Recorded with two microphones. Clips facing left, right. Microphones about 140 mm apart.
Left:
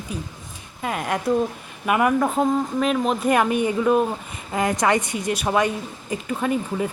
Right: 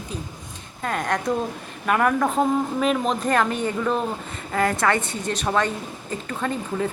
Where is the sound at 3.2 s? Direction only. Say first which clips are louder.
Left 4 dB; 15° left (ahead or behind).